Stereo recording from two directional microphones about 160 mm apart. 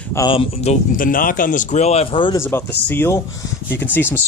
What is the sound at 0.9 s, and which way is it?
Speech, 60° left (ahead or behind).